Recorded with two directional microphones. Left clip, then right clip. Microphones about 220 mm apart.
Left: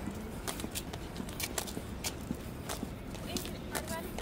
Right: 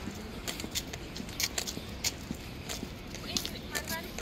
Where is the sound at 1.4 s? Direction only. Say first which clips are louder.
Right 5 dB; 35° left (ahead or behind).